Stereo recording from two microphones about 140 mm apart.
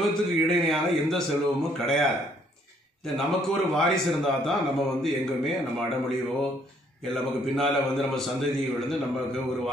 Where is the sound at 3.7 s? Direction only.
Centre (ahead or behind).